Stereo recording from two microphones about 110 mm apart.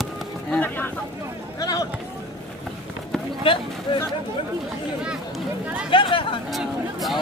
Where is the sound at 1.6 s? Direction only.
35° left (ahead or behind).